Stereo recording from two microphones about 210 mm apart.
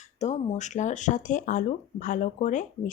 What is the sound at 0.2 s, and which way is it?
Speech, 30° left (ahead or behind).